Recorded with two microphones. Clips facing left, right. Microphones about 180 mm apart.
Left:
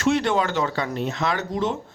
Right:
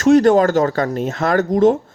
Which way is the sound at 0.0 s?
45° right (ahead or behind).